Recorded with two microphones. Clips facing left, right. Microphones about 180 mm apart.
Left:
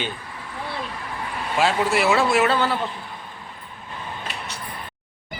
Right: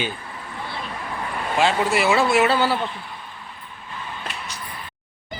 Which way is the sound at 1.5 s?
Centre (ahead or behind).